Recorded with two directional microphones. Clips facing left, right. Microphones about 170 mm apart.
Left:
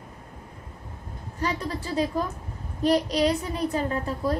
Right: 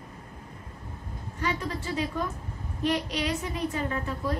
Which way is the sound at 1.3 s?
35° left (ahead or behind).